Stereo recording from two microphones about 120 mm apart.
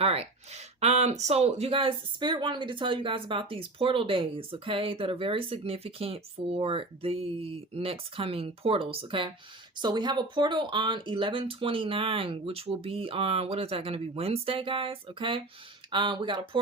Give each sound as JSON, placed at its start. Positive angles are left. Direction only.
{"t": 0.0, "sound": "speech", "side_deg": -55}